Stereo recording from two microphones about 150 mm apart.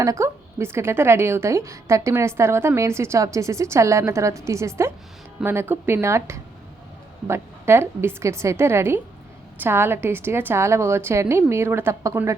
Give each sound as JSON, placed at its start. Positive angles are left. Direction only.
{"t": 0.0, "sound": "a woman's voice", "side_deg": -20}